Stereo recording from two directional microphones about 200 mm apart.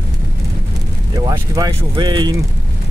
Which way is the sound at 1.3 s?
15° right (ahead or behind).